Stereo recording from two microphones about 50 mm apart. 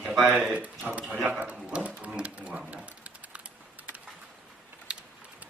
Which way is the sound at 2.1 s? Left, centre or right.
Right.